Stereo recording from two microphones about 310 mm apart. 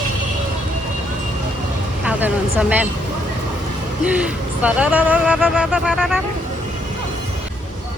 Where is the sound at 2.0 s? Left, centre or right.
Centre.